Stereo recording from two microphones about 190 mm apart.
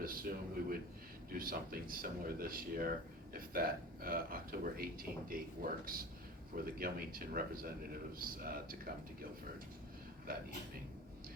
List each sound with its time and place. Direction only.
0.0 s a man's voice: 50° right (ahead or behind)
10.3 s a man's voice: 50° right (ahead or behind)